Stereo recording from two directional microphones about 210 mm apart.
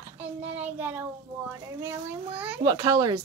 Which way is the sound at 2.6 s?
20° right (ahead or behind).